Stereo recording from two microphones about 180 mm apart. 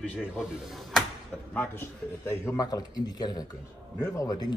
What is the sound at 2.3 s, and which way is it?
Speech, 20° left (ahead or behind).